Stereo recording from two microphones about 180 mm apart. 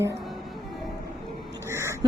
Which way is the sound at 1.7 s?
15° right (ahead or behind).